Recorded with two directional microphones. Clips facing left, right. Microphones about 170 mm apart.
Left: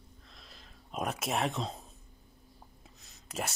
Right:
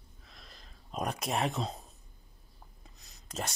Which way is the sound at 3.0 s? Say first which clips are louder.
Left 1 dB; 5° left (ahead or behind).